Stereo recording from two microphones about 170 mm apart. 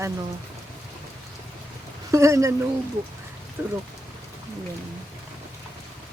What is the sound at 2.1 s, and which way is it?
Speech, 20° right (ahead or behind).